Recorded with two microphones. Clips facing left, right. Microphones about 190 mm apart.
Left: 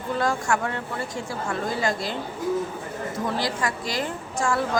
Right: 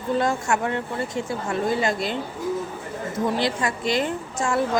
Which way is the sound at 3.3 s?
25° right (ahead or behind).